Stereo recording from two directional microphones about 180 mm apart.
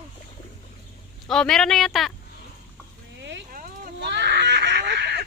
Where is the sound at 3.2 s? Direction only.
75° right (ahead or behind).